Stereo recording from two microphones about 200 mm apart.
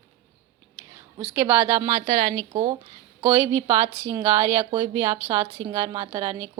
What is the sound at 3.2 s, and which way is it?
A woman's voice, 20° right (ahead or behind).